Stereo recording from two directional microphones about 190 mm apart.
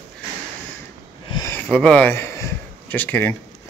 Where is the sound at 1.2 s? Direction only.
20° left (ahead or behind).